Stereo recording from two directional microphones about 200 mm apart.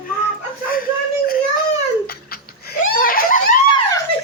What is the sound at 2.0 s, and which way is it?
Giggle, 50° left (ahead or behind).